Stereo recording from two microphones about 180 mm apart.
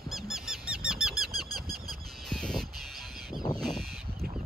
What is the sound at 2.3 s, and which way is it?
Crow, centre (ahead or behind).